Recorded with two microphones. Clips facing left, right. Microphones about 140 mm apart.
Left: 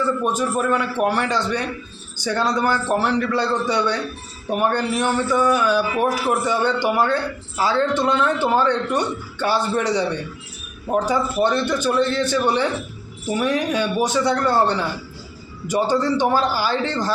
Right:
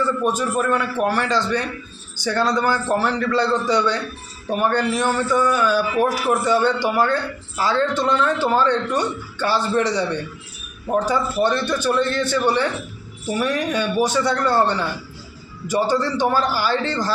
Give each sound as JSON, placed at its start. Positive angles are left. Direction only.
{"t": 0.3, "sound": "a man's voice", "side_deg": 15}